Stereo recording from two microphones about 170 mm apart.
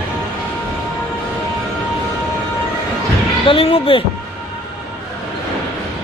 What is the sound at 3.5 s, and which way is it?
Speech, 30° left (ahead or behind).